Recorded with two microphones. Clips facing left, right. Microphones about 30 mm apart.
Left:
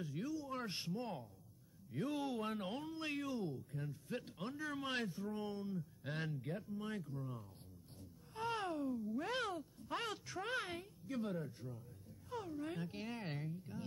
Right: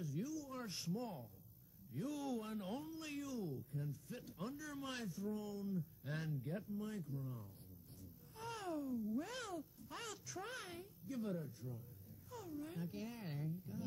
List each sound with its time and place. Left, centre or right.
0.0 s speech: left
7.2 s speech: left
8.0 s speech: left